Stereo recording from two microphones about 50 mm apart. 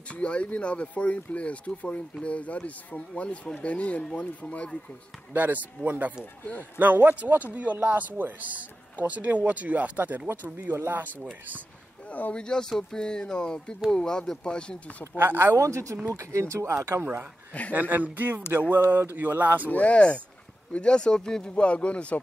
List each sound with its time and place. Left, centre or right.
0.1 s speech: left
5.3 s speech: right
10.7 s speech: right
12.1 s speech: left
12.4 s speech: centre
15.1 s speech: right
15.5 s speech: right
16.7 s speech: right
17.5 s speech: left
17.7 s speech: right
19.7 s speech: left
21.5 s speech: left